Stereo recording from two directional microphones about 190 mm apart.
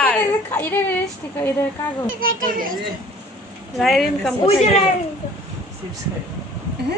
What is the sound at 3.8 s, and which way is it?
Speech, centre (ahead or behind).